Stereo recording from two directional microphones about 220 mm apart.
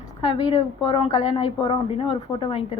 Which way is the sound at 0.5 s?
20° left (ahead or behind).